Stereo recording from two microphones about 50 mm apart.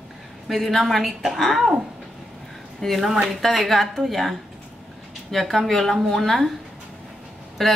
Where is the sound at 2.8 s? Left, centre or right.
Centre.